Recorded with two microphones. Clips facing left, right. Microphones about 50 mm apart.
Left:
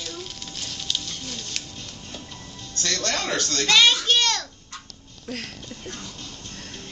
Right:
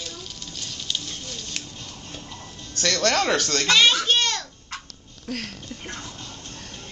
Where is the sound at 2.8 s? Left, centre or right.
Right.